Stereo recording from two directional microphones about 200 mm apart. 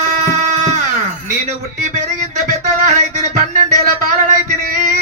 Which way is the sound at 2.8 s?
35° right (ahead or behind).